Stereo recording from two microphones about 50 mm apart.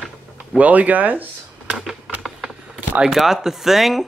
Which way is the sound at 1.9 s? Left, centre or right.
Centre.